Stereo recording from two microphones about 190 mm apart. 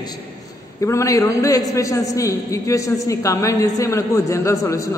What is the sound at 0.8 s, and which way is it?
A man's voice, 15° left (ahead or behind).